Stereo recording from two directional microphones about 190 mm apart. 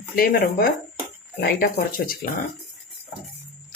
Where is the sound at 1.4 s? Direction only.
55° left (ahead or behind).